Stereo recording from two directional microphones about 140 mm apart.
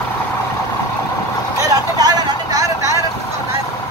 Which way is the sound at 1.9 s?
25° right (ahead or behind).